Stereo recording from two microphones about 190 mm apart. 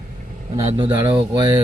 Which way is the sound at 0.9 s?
10° right (ahead or behind).